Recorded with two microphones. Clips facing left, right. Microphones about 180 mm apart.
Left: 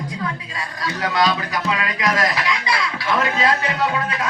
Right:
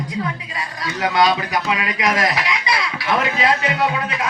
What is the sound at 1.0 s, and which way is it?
Chicken, 15° right (ahead or behind).